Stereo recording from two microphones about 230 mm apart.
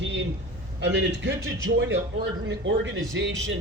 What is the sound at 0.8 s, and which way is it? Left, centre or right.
Speech, right.